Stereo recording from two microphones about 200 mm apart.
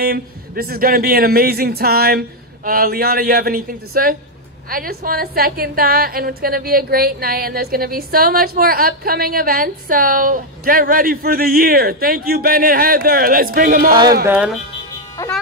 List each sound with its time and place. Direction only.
0.0 s a woman's voice: 50° right (ahead or behind)
14.2 s speech: 5° right (ahead or behind)
15.2 s speech: 15° left (ahead or behind)